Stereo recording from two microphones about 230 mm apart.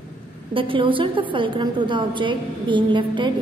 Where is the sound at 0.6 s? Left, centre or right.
Right.